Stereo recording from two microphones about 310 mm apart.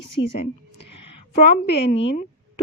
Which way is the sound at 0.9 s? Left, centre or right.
Left.